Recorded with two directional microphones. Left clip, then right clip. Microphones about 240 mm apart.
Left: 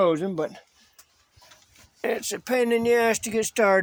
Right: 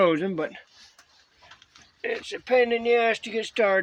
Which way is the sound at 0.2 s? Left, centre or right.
Left.